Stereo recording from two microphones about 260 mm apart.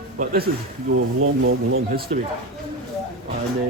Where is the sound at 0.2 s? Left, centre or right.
Right.